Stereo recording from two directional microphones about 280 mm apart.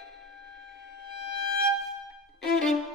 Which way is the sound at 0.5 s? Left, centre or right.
Centre.